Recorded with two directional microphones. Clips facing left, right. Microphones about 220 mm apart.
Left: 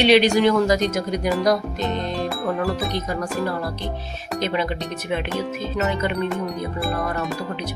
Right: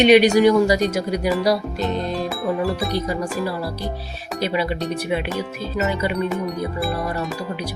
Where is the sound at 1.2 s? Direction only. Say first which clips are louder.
Even; 5° right (ahead or behind).